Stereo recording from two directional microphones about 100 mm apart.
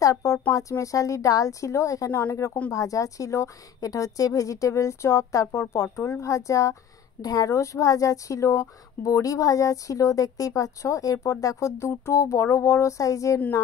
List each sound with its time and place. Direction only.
0.0 s a woman's voice: 35° left (ahead or behind)